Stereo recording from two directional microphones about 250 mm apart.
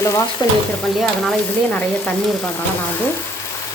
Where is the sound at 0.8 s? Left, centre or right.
Centre.